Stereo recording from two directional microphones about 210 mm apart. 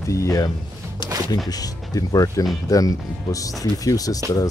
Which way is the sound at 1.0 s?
20° left (ahead or behind).